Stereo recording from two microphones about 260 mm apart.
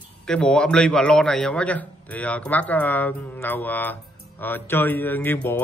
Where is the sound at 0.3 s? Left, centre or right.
Centre.